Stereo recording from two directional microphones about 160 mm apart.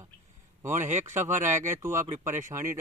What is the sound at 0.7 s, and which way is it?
Speech, 50° right (ahead or behind).